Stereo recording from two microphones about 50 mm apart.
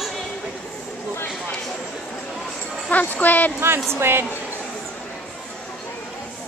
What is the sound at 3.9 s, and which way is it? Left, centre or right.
Speech, right.